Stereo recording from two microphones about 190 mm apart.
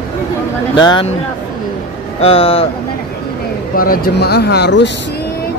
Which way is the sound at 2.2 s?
30° left (ahead or behind).